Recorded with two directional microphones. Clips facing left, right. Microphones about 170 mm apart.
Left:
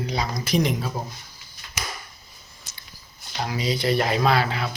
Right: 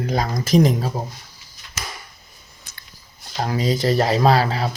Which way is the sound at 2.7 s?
55° right (ahead or behind).